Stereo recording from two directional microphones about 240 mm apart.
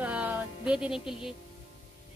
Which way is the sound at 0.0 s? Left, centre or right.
Centre.